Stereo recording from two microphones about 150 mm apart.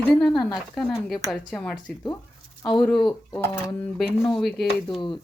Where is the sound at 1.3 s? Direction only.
5° left (ahead or behind).